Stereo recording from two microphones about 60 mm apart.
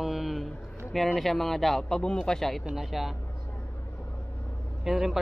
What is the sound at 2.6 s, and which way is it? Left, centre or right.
Speech, centre.